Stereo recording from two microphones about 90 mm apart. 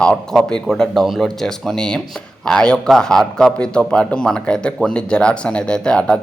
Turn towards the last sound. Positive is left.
turn(degrees=10)  # may be behind; listen again after turning